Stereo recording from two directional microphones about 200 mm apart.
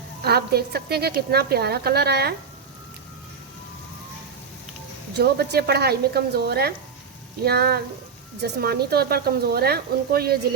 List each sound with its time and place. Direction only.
0.3 s a woman's voice: 55° right (ahead or behind)
5.1 s a woman's voice: 55° right (ahead or behind)